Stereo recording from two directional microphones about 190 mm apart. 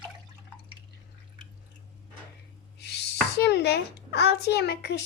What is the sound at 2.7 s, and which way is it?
A child's voice, 60° left (ahead or behind).